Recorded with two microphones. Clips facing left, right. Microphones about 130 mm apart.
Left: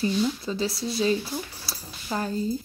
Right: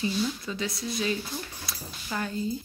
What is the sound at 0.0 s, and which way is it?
A woman's voice, 30° left (ahead or behind).